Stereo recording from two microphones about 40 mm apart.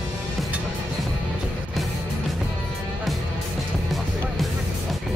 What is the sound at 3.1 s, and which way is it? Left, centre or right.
Music, centre.